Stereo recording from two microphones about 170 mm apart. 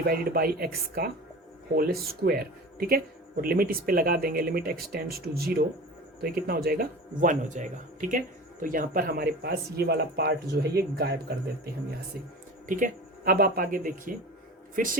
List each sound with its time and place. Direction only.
0.0 s speech: 60° right (ahead or behind)
12.6 s speech: 50° right (ahead or behind)